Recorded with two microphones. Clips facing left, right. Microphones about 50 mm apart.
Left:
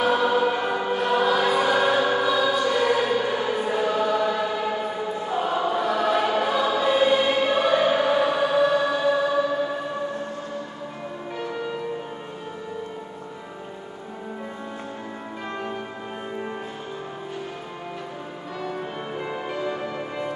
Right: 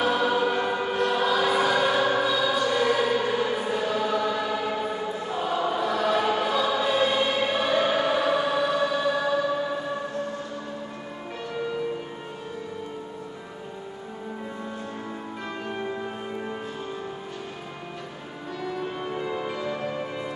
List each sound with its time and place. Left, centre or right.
0.0 s choir: centre
18.8 s music: centre